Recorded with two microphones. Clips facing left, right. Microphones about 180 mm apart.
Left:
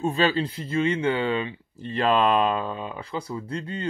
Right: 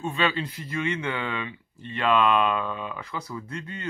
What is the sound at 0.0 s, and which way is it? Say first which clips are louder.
Speech: left 4 dB; 35° left (ahead or behind).